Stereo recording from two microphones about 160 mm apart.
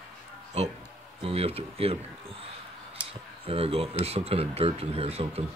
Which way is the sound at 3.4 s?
40° right (ahead or behind).